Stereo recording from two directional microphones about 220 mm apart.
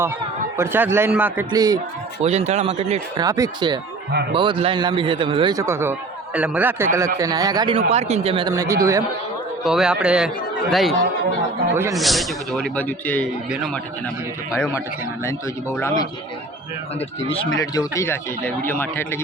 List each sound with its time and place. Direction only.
0.5 s a man's voice: 10° right (ahead or behind)
2.2 s a man's voice: 30° right (ahead or behind)
3.2 s a man's voice: 15° right (ahead or behind)
4.1 s a man's voice: 50° right (ahead or behind)
4.4 s a man's voice: 20° right (ahead or behind)
7.9 s speech: 30° right (ahead or behind); by 9.0 s 15° right (ahead or behind)
9.6 s a man's voice: 5° right (ahead or behind)
11.7 s a man's voice: 10° right (ahead or behind)
11.9 s a man's voice: centre (ahead or behind)
15.2 s speech: 10° left (ahead or behind)
17.2 s speech: 25° left (ahead or behind)
17.6 s speech: 15° left (ahead or behind)